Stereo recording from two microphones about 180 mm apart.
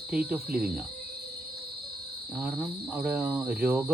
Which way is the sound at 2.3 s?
10° right (ahead or behind).